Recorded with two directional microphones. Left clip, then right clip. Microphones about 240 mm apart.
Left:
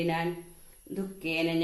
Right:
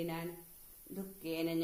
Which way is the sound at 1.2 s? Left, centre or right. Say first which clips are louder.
Left 8 dB; right.